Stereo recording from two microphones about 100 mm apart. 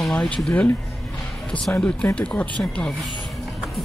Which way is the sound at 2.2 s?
10° left (ahead or behind).